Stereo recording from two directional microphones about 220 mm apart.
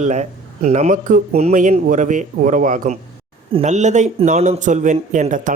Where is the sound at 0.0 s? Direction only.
30° right (ahead or behind).